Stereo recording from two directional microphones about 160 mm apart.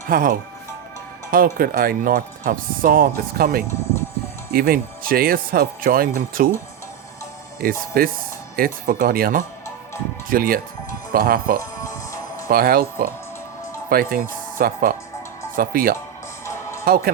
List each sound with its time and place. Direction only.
0.1 s speech: 60° right (ahead or behind)
7.6 s speech: 65° right (ahead or behind)
11.6 s music: 20° left (ahead or behind)
12.5 s speech: 65° right (ahead or behind)